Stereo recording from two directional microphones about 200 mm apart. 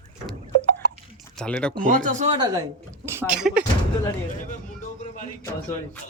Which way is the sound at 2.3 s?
20° right (ahead or behind).